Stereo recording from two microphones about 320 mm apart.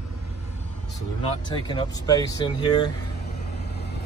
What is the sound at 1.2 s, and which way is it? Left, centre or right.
Speech, centre.